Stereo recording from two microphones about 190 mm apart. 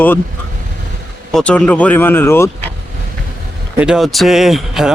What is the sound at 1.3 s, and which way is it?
Speech, 5° left (ahead or behind).